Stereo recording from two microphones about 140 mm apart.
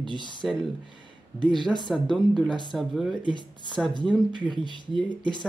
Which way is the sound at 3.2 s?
35° left (ahead or behind).